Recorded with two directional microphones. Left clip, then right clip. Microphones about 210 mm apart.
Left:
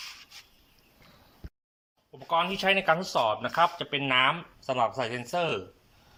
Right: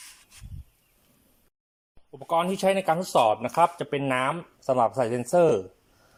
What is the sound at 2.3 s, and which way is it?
Speech, 25° right (ahead or behind).